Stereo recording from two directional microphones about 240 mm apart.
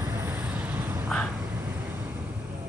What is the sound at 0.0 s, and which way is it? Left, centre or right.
Vehicle, centre.